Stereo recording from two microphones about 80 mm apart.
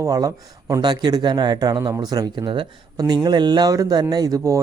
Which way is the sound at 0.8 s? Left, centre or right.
Right.